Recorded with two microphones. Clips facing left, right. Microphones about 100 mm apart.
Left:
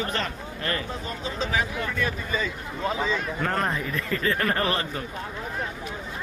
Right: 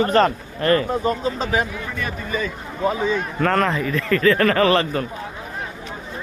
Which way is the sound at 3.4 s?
90° right.